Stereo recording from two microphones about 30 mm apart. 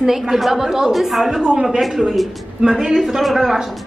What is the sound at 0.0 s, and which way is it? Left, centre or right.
A woman's voice, centre.